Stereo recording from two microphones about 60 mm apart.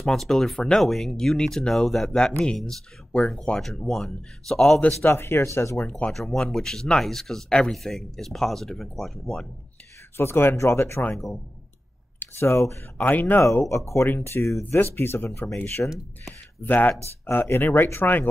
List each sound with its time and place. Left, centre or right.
0.0 s speech: centre
5.0 s speech: left
5.8 s speech: left
6.1 s speech: centre
10.1 s speech: left
12.4 s speech: left
12.9 s speech: left
13.7 s speech: left
14.6 s speech: left